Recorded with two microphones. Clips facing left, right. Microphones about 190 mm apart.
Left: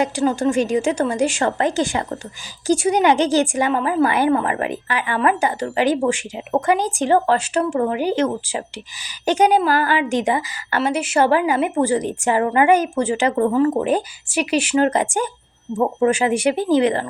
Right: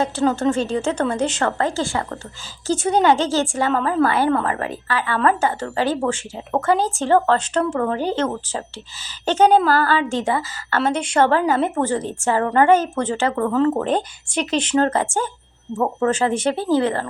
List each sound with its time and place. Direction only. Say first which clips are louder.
0.0 s a woman's voice: even; 15° left (ahead or behind)